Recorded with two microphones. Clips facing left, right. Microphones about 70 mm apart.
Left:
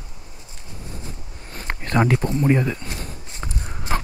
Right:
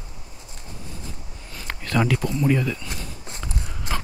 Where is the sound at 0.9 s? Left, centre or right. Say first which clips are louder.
Left 2 dB; left.